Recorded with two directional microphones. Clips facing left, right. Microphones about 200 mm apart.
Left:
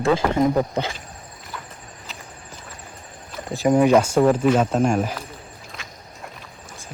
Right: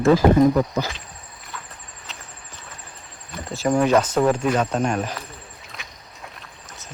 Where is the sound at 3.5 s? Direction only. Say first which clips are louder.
Left 3 dB; 15° left (ahead or behind).